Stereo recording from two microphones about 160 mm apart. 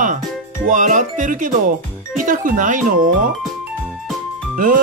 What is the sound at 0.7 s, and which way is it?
Speech, 50° right (ahead or behind).